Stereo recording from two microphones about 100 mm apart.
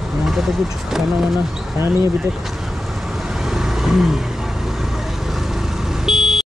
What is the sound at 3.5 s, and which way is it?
Vehicle, 5° right (ahead or behind).